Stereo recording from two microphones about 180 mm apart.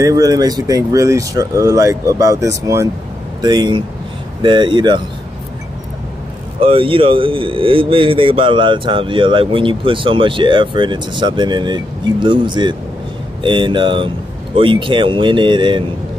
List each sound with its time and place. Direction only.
0.0 s speech: 20° right (ahead or behind)
6.6 s speech: 30° right (ahead or behind)